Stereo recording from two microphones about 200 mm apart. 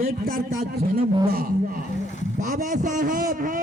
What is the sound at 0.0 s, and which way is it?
A man's voice, 50° right (ahead or behind).